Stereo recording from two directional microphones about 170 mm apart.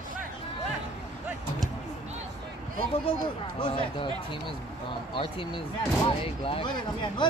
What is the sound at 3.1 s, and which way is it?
Speech, 35° left (ahead or behind).